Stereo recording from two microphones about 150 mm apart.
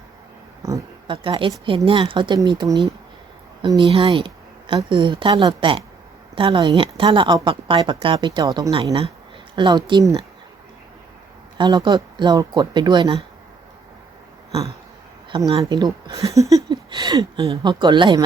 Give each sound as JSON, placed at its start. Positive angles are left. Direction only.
{"t": 0.6, "sound": "a sound", "side_deg": -20}
{"t": 1.0, "sound": "a woman's voice", "side_deg": -35}
{"t": 11.5, "sound": "speech", "side_deg": -30}
{"t": 15.7, "sound": "a woman's voice", "side_deg": -25}